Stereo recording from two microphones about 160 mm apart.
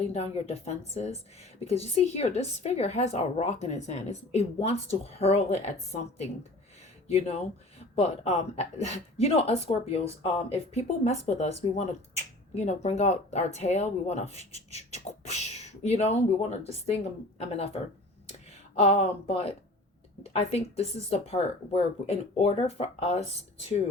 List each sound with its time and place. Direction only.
0.0 s speech: 40° left (ahead or behind)